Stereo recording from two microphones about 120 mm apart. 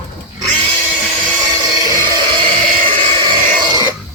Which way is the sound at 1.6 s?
35° right (ahead or behind).